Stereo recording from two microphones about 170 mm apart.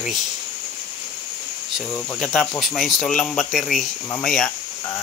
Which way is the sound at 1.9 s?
5° left (ahead or behind).